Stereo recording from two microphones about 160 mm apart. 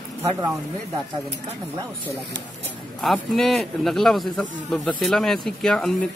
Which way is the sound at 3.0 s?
Centre (ahead or behind).